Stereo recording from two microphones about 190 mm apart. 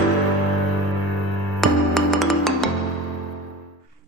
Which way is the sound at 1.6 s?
Centre (ahead or behind).